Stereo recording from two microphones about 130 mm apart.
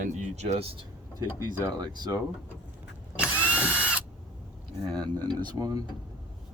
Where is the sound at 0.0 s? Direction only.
65° right (ahead or behind).